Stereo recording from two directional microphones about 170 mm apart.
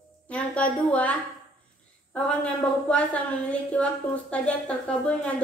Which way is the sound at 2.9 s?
5° left (ahead or behind).